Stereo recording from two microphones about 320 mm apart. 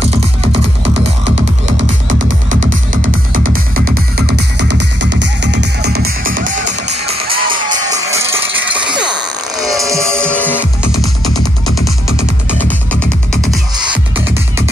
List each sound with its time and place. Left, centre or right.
1.7 s music: right
7.5 s music: centre
9.6 s music: centre